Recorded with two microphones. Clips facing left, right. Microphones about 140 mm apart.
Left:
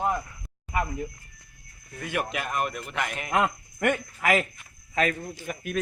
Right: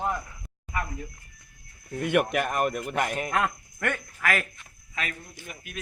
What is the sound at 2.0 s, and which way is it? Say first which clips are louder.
Speech: right 7 dB; 60° right (ahead or behind).